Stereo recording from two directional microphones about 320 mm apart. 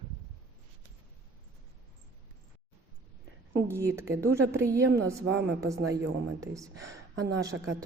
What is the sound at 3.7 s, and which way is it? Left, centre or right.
Speech, centre.